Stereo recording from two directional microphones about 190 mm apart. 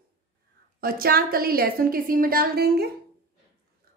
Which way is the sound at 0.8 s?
50° right (ahead or behind).